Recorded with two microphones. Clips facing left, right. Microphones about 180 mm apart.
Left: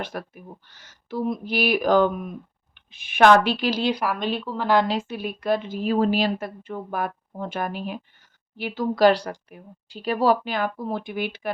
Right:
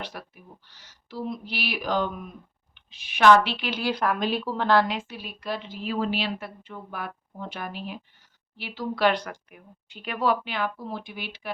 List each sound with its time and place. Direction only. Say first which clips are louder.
0.0 s a woman's voice: left 6 dB; 50° left (ahead or behind)
3.8 s a woman's voice: left 1 dB; 10° left (ahead or behind)
4.9 s a woman's voice: left 6 dB; 45° left (ahead or behind)